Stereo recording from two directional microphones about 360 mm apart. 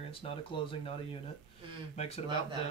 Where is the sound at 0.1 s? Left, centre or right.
Centre.